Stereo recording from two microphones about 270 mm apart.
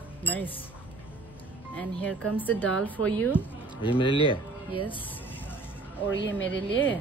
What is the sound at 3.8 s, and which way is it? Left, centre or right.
Speech, centre.